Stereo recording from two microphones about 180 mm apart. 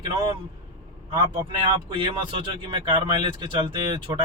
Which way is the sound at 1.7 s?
25° right (ahead or behind).